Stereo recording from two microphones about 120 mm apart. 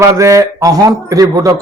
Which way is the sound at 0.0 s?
25° right (ahead or behind).